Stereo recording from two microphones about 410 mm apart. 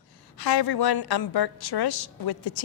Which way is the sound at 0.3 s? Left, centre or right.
Left.